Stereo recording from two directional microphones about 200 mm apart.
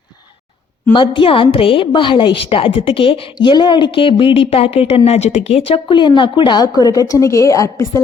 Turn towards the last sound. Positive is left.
turn(degrees=15)  # may be behind; listen again after turning